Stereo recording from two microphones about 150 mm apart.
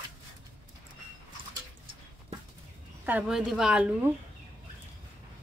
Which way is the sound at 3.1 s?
5° right (ahead or behind).